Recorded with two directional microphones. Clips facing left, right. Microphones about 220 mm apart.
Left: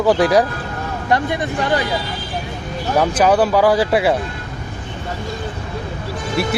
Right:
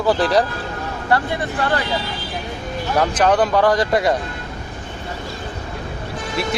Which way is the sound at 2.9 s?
10° left (ahead or behind).